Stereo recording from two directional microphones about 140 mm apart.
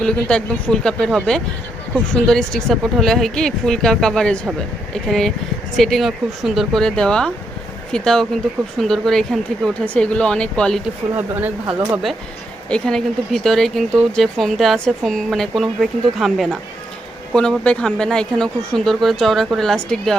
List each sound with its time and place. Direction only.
0.0 s speech: 5° left (ahead or behind)
11.2 s speech: 10° right (ahead or behind)
12.7 s speech: 5° left (ahead or behind)